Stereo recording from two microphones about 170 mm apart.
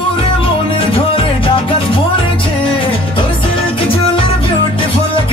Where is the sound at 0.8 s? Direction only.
30° left (ahead or behind).